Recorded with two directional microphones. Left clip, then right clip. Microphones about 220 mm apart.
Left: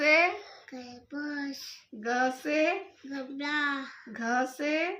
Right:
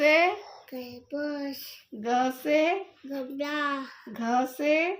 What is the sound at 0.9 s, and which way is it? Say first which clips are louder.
Child singing: right 6 dB; 15° left (ahead or behind).